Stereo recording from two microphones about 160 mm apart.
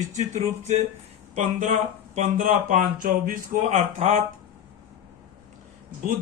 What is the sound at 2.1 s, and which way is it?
Speech, 50° right (ahead or behind).